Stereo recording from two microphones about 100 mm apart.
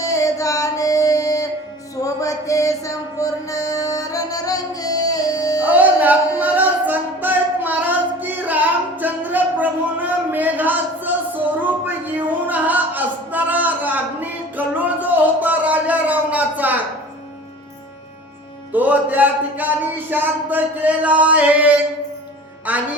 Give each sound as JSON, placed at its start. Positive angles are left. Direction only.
{"t": 0.0, "sound": "music", "side_deg": 35}
{"t": 5.6, "sound": "music", "side_deg": -15}
{"t": 11.6, "sound": "a sound", "side_deg": -20}
{"t": 18.7, "sound": "music", "side_deg": -15}
{"t": 20.1, "sound": "a sound", "side_deg": -20}
{"t": 22.7, "sound": "music", "side_deg": -15}